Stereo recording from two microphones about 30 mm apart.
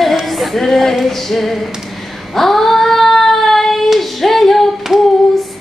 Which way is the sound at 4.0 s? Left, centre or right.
Centre.